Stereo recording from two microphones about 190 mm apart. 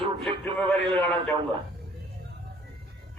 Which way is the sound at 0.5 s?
5° left (ahead or behind).